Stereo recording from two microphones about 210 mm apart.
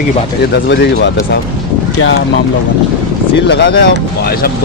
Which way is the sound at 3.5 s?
55° left (ahead or behind).